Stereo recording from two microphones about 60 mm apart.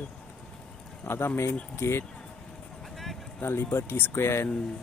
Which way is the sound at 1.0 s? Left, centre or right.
Left.